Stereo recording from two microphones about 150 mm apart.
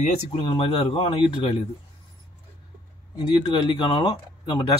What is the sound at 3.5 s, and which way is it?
Speech, 35° left (ahead or behind).